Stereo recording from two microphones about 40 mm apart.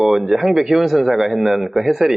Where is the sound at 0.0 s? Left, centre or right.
Centre.